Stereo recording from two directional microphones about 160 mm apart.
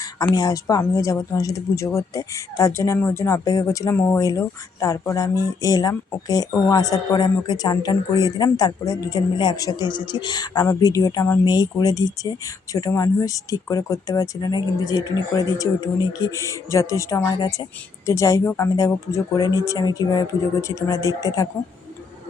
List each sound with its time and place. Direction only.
0.2 s speech: 25° left (ahead or behind)